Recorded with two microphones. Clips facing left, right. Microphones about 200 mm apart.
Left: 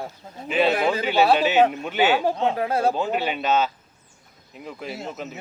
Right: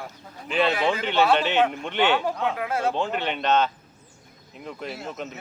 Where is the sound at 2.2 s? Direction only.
30° left (ahead or behind).